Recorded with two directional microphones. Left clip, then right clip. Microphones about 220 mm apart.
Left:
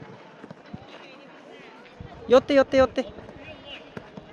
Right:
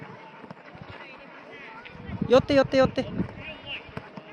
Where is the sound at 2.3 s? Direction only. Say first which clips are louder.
Left 2 dB; centre (ahead or behind).